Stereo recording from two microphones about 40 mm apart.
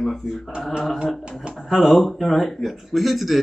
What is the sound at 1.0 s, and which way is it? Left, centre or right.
Speech, centre.